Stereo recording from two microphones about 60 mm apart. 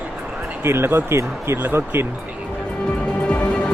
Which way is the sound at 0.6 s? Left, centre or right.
Right.